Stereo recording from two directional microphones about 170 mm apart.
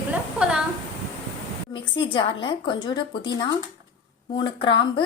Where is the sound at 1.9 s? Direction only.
30° left (ahead or behind).